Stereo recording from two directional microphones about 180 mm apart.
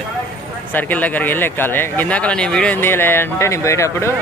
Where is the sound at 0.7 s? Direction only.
10° left (ahead or behind).